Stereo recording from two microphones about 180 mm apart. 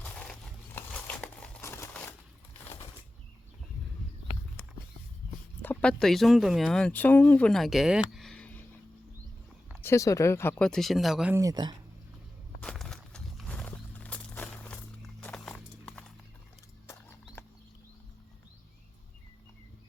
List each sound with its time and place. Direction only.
0.0 s a sound: 5° left (ahead or behind)
0.8 s crumpling: 10° left (ahead or behind)
5.6 s speech: 5° left (ahead or behind)
9.8 s speech: 15° left (ahead or behind); by 11.3 s 5° right (ahead or behind)
11.3 s speech: 20° right (ahead or behind)
12.6 s a sound: centre (ahead or behind)
15.2 s horse: 5° left (ahead or behind)